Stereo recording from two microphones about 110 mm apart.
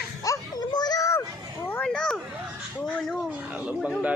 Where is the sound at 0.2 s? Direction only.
35° left (ahead or behind).